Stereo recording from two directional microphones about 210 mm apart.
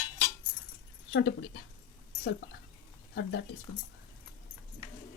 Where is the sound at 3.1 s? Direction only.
55° left (ahead or behind).